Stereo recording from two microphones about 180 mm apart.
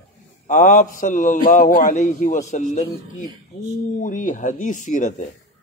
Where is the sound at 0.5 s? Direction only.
45° left (ahead or behind).